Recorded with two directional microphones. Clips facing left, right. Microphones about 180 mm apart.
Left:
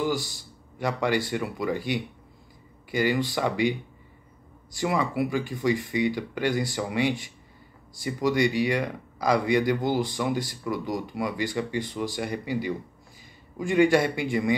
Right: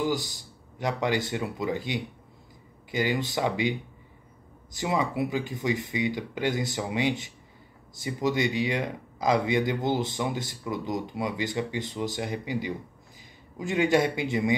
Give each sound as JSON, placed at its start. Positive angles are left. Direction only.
{"t": 0.1, "sound": "speech", "side_deg": -20}
{"t": 4.7, "sound": "speech", "side_deg": -20}